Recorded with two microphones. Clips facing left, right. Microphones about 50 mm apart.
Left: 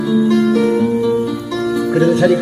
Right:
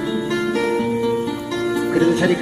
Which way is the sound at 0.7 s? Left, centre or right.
Right.